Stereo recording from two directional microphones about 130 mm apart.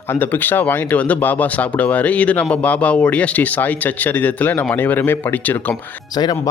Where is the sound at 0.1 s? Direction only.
15° left (ahead or behind).